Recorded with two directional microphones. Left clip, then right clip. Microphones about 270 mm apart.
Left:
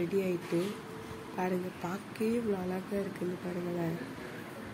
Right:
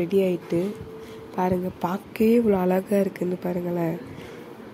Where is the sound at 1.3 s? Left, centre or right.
Right.